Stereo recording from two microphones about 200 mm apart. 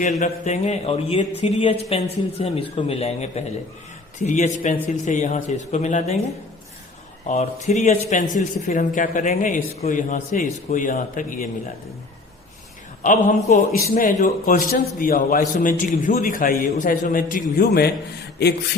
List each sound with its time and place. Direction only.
0.0 s a man's voice: 35° left (ahead or behind)
7.3 s a man's voice: 35° left (ahead or behind)
13.0 s a man's voice: 40° left (ahead or behind)
18.4 s a sound: 55° left (ahead or behind)